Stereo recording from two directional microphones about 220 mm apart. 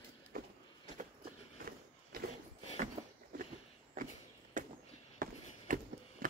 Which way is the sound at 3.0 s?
25° right (ahead or behind).